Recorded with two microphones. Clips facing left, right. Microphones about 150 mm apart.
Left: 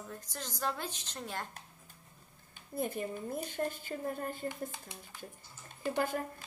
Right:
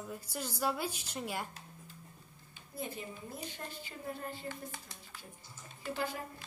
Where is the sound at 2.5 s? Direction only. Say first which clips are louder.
Left 6 dB; 50° left (ahead or behind).